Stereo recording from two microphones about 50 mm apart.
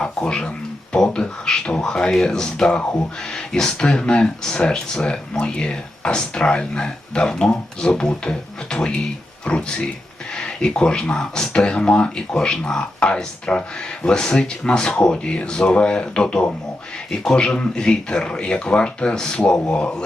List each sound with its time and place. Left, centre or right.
0.0 s speech: centre